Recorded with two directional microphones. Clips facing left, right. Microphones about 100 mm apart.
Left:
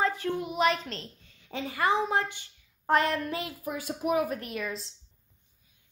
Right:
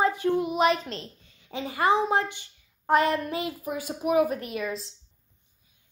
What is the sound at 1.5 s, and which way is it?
A woman's voice, 20° right (ahead or behind).